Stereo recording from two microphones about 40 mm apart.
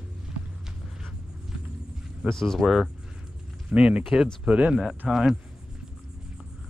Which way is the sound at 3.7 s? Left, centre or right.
Right.